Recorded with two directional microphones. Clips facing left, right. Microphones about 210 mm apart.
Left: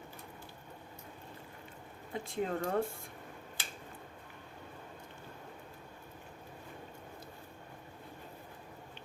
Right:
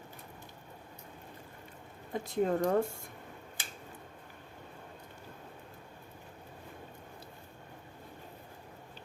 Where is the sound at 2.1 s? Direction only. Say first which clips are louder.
Right 5 dB; 40° right (ahead or behind).